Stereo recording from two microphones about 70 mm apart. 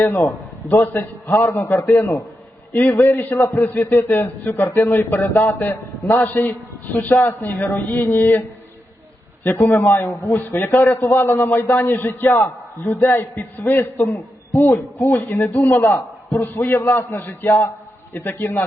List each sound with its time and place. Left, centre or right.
0.1 s a man's voice: left